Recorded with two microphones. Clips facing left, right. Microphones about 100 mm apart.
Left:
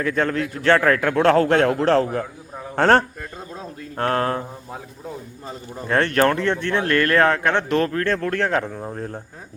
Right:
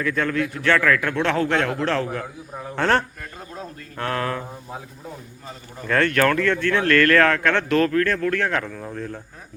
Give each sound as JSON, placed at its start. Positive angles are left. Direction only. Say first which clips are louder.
{"t": 0.0, "sound": "a man's voice", "louder": "left 1 dB", "side_deg": 35}
{"t": 5.5, "sound": "speech", "louder": "left 1 dB", "side_deg": 30}